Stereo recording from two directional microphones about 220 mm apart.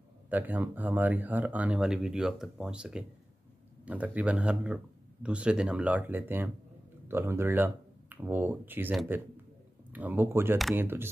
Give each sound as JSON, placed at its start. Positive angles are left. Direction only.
{"t": 0.3, "sound": "speech", "side_deg": -10}